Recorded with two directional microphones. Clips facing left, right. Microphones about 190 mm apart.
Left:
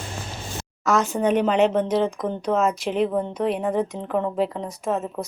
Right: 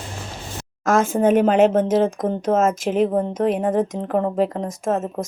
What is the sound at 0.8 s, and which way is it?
Speech, 50° right (ahead or behind).